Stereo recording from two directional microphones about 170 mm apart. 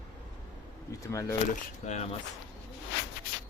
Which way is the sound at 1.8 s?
40° left (ahead or behind).